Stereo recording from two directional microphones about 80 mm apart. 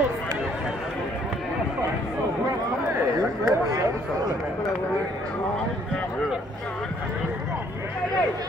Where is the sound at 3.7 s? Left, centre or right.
Right.